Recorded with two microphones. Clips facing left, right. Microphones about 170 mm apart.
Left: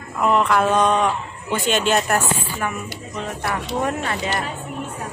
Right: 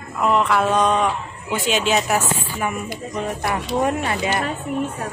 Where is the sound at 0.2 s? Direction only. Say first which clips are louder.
Left 1 dB; centre (ahead or behind).